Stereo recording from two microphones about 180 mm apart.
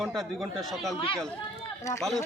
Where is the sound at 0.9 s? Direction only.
30° left (ahead or behind).